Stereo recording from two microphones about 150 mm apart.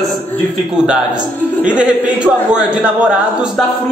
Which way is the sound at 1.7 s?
10° right (ahead or behind).